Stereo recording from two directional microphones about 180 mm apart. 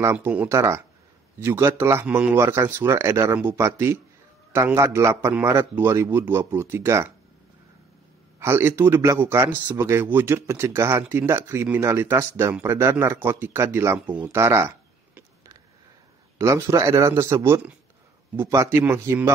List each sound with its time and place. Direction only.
0.0 s a man's voice: 10° right (ahead or behind)
8.4 s a man's voice: 15° right (ahead or behind)
16.3 s a man's voice: 15° right (ahead or behind)